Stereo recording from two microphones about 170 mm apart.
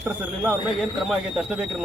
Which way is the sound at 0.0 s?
5° right (ahead or behind).